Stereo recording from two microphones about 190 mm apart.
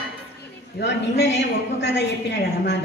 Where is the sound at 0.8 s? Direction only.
65° left (ahead or behind).